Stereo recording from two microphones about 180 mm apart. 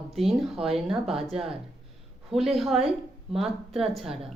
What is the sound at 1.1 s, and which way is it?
Speech, 30° right (ahead or behind).